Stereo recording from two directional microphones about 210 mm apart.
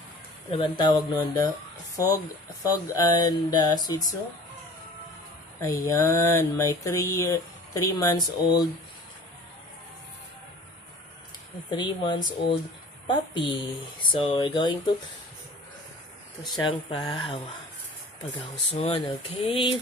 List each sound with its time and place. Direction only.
0.6 s speech: 20° left (ahead or behind)
5.6 s speech: 15° left (ahead or behind)
11.7 s speech: 20° left (ahead or behind)
16.5 s speech: 20° left (ahead or behind)
18.7 s speech: 30° left (ahead or behind)